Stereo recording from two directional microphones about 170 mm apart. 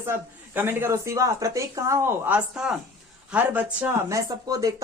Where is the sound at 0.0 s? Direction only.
15° right (ahead or behind).